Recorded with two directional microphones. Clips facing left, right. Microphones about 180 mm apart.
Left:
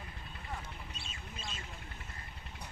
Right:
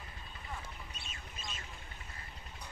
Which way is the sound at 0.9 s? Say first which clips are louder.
Left 2 dB; 30° left (ahead or behind).